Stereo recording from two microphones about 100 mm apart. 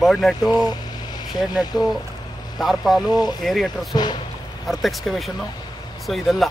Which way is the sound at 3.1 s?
45° left (ahead or behind).